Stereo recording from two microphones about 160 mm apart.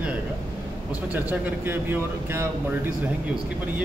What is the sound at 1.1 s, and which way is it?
Mantra, 15° right (ahead or behind).